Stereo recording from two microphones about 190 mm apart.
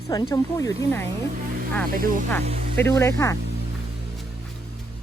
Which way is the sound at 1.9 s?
45° right (ahead or behind).